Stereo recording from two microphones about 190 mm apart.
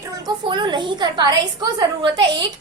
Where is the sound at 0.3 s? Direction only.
25° right (ahead or behind).